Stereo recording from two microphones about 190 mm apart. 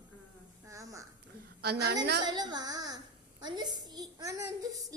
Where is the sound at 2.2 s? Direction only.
20° right (ahead or behind).